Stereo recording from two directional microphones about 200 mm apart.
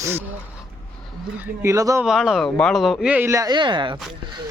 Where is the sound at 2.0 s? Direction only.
Centre (ahead or behind).